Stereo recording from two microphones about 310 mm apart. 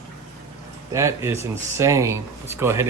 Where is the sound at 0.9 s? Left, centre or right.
Centre.